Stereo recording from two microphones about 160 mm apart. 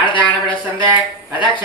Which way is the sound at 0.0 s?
30° left (ahead or behind).